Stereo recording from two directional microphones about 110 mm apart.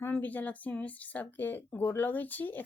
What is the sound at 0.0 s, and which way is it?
Speech, 15° left (ahead or behind).